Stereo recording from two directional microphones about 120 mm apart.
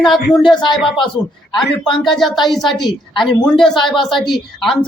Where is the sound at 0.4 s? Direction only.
40° left (ahead or behind).